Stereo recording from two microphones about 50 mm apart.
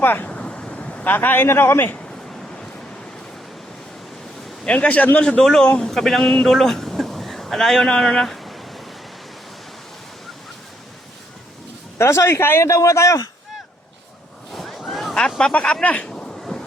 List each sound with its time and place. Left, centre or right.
0.0 s speech: left
0.3 s waves: left
1.1 s a man's voice: left
4.6 s a man's voice: left
5.4 s speech: centre
7.9 s a sound: centre
11.9 s a man's voice: left
12.4 s a man's voice: left
12.6 s a man's voice: left
14.5 s waves: centre
15.4 s speech: centre
15.8 s speech: left
16.0 s a sound: centre